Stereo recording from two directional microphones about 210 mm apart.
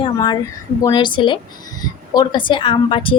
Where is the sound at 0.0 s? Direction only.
20° left (ahead or behind).